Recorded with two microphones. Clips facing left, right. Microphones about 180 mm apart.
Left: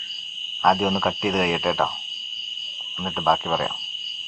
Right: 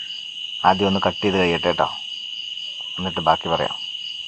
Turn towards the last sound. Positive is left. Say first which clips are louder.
# right 3 dB
turn(degrees=0)  # may be behind; listen again after turning